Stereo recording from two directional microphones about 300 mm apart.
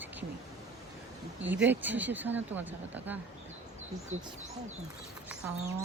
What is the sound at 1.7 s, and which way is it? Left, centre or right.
Speech, centre.